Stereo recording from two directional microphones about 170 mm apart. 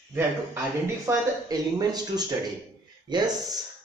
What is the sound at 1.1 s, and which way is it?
Speech, 20° right (ahead or behind).